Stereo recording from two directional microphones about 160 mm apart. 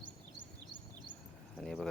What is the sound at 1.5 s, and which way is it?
Speech, centre (ahead or behind).